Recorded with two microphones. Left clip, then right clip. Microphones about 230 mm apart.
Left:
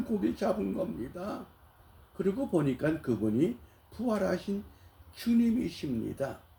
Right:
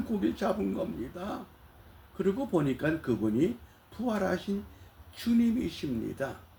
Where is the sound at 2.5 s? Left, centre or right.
Centre.